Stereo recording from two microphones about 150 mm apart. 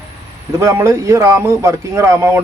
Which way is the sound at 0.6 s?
20° right (ahead or behind).